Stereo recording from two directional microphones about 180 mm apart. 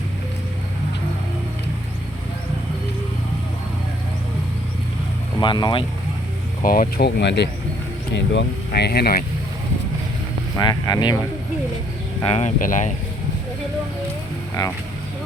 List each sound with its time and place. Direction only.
5.4 s speech: 25° left (ahead or behind)
6.6 s speech: 50° left (ahead or behind)
10.6 s speech: 20° left (ahead or behind)
12.2 s speech: 35° left (ahead or behind)
12.5 s speech: 45° left (ahead or behind)
14.6 s speech: 25° left (ahead or behind)